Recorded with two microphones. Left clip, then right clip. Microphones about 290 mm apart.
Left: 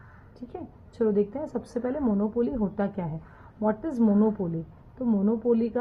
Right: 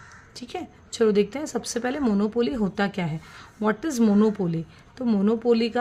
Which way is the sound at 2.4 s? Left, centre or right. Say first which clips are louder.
Right 3 dB; right.